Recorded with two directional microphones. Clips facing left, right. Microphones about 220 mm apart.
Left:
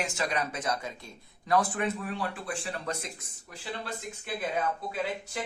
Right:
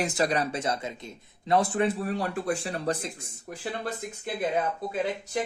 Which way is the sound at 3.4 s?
50° right (ahead or behind).